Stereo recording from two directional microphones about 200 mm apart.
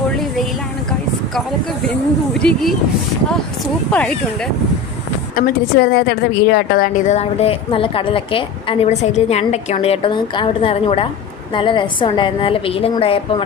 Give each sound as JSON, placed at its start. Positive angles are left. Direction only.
{"t": 2.4, "sound": "speech", "side_deg": 5}
{"t": 3.9, "sound": "speech", "side_deg": 5}
{"t": 5.3, "sound": "a woman's voice", "side_deg": 50}